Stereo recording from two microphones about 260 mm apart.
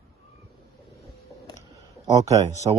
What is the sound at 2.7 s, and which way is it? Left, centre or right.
Speech, centre.